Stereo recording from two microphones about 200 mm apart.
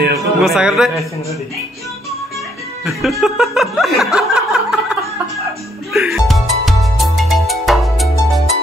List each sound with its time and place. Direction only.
0.4 s chuckle: 5° right (ahead or behind)
2.8 s chuckle: centre (ahead or behind)
5.9 s music: centre (ahead or behind)